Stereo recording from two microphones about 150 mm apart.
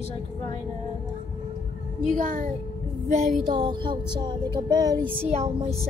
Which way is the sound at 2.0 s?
60° right (ahead or behind).